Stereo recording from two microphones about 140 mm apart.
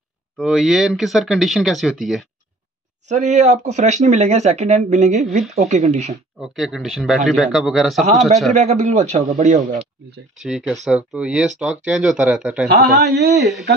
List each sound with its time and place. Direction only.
0.4 s speech: 5° right (ahead or behind)
3.1 s speech: 55° right (ahead or behind)
6.4 s speech: 5° right (ahead or behind)
8.5 s speech: 60° right (ahead or behind)
10.3 s speech: 5° right (ahead or behind)